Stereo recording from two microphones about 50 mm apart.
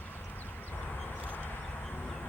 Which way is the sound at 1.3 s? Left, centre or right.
Left.